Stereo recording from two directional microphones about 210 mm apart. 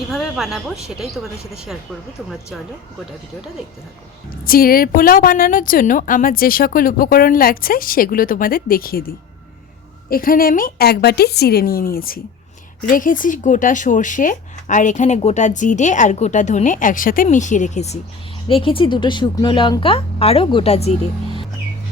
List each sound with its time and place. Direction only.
0.1 s a woman's voice: centre (ahead or behind)
4.4 s a woman's voice: 45° left (ahead or behind)